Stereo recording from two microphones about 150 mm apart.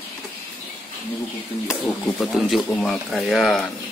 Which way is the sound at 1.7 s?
Centre (ahead or behind).